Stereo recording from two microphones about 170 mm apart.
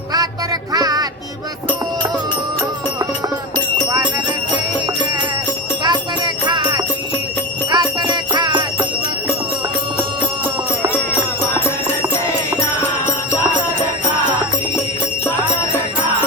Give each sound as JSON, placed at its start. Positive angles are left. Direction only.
{"t": 0.1, "sound": "music", "side_deg": -20}
{"t": 3.8, "sound": "jingle bell", "side_deg": -20}
{"t": 5.8, "sound": "music", "side_deg": -25}
{"t": 12.8, "sound": "jingle bell", "side_deg": 15}